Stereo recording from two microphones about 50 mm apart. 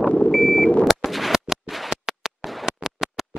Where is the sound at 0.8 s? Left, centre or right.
Centre.